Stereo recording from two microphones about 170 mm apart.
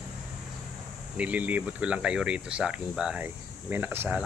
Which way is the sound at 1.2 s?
10° right (ahead or behind).